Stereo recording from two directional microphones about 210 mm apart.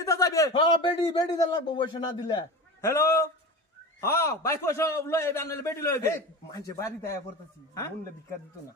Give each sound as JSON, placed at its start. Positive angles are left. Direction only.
{"t": 0.0, "sound": "a man's voice", "side_deg": 15}